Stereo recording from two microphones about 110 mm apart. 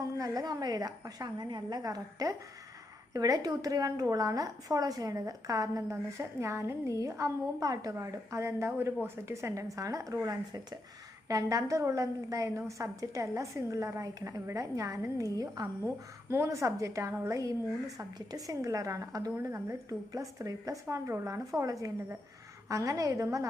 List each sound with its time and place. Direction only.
0.2 s a woman's voice: 35° right (ahead or behind)